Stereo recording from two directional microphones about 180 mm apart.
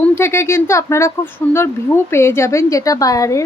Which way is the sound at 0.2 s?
15° left (ahead or behind).